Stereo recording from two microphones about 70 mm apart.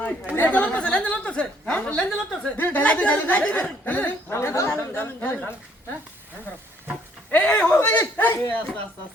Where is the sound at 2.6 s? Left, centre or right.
Left.